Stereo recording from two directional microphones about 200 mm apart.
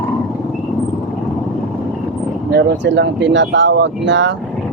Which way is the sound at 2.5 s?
60° right (ahead or behind).